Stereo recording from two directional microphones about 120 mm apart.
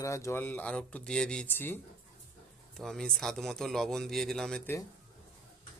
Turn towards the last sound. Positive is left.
turn(degrees=5)  # may be behind; listen again after turning